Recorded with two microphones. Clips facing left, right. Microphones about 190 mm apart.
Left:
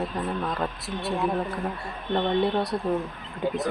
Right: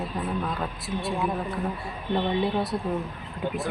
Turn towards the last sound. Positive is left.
turn(degrees=-5)  # may be behind; listen again after turning